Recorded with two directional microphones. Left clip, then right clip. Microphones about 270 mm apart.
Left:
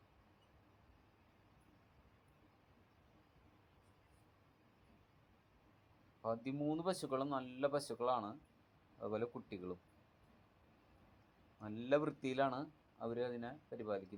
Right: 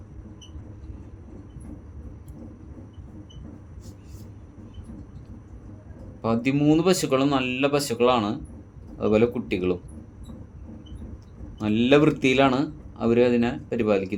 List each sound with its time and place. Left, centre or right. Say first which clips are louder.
6.2 s speech: right 19 dB; centre
11.6 s a man's voice: right 18 dB; centre